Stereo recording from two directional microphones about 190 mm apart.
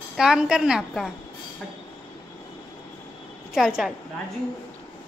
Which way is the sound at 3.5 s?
Centre (ahead or behind).